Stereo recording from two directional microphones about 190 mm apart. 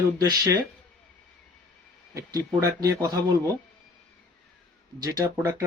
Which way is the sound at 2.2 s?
15° right (ahead or behind).